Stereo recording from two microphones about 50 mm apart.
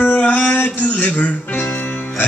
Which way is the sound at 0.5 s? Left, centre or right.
Left.